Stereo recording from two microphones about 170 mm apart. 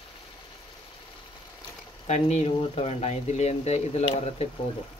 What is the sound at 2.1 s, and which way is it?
Speech, 40° left (ahead or behind).